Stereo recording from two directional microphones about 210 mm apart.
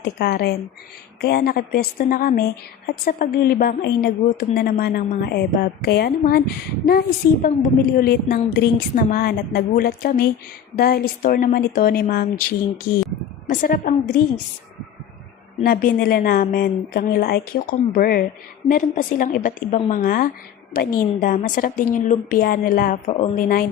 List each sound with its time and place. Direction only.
0.0 s a woman's voice: 50° left (ahead or behind)
15.6 s a woman's voice: 45° left (ahead or behind)